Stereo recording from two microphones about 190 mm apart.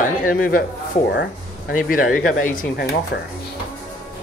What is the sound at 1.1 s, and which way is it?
Speech, 65° left (ahead or behind).